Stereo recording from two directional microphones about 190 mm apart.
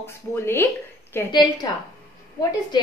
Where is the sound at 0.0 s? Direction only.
10° left (ahead or behind).